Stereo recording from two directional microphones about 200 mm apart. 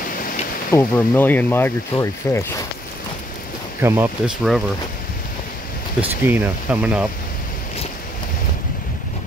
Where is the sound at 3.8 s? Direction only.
10° right (ahead or behind).